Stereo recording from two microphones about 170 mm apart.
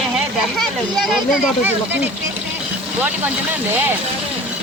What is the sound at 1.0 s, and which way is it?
Speech, 5° right (ahead or behind).